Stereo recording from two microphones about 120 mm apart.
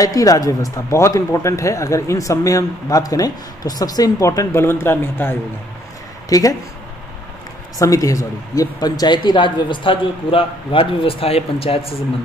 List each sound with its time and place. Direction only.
0.0 s speech: 30° left (ahead or behind)
6.2 s speech: 30° left (ahead or behind)
7.8 s speech: 30° left (ahead or behind); by 11.9 s 55° left (ahead or behind)